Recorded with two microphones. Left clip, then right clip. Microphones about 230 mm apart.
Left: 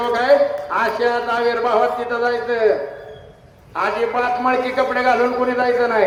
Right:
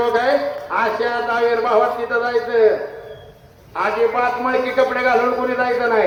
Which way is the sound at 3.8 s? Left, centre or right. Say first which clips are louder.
Right 2 dB; left.